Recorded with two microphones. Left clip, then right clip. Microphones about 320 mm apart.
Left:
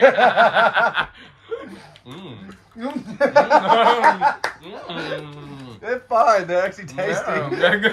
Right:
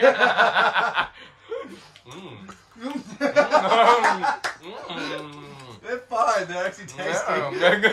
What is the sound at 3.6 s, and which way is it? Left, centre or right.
Speech, right.